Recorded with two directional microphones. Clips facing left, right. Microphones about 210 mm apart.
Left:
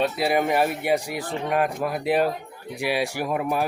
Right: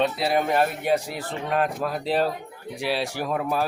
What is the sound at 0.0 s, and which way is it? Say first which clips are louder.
Speech: left 1 dB; 10° left (ahead or behind).